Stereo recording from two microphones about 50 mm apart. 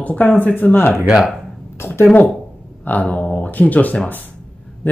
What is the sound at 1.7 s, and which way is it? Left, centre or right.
Speech, left.